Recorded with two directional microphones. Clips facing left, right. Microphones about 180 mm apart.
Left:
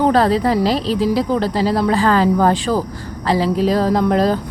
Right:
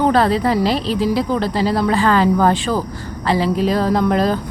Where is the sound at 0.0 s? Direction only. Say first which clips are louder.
Left 1 dB; 35° left (ahead or behind).